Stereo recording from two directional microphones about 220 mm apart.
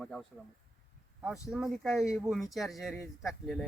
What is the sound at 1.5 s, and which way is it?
Speech, centre (ahead or behind).